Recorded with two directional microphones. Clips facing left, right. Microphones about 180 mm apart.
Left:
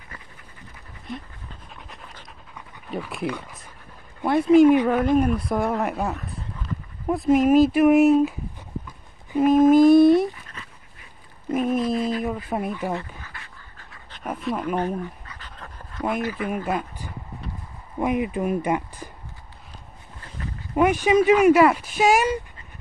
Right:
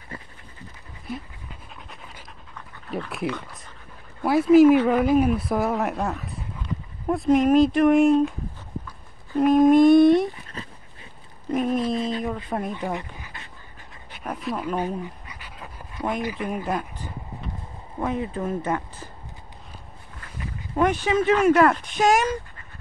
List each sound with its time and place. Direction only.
2.9 s speech: centre (ahead or behind)
9.4 s a sound: centre (ahead or behind)
11.5 s a sound: centre (ahead or behind)
11.8 s a sound: 25° right (ahead or behind)
12.4 s speech: 5° left (ahead or behind)
12.9 s dog: 20° right (ahead or behind)
14.2 s speech: centre (ahead or behind)
15.0 s dog: 10° right (ahead or behind)
16.2 s speech: 15° right (ahead or behind)
16.6 s speech: 10° left (ahead or behind)
20.7 s speech: 10° left (ahead or behind)